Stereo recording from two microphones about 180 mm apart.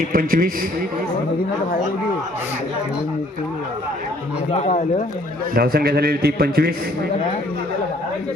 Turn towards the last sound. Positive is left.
turn(degrees=-60)  # may be behind; listen again after turning